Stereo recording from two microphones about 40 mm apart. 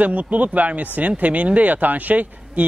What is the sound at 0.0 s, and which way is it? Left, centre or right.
Speech, right.